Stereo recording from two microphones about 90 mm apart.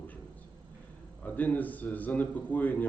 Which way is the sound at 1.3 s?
20° left (ahead or behind).